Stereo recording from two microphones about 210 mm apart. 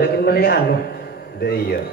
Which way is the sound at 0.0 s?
45° left (ahead or behind).